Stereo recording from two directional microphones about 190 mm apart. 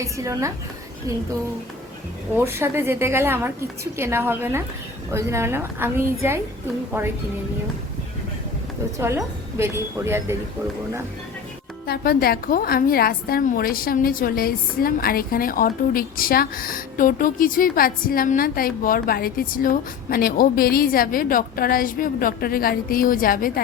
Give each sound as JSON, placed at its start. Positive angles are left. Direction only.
{"t": 0.0, "sound": "a woman's voice", "side_deg": -15}
{"t": 2.3, "sound": "a woman's voice", "side_deg": -15}
{"t": 9.0, "sound": "a woman's voice", "side_deg": -15}
{"t": 11.9, "sound": "a woman's voice", "side_deg": 50}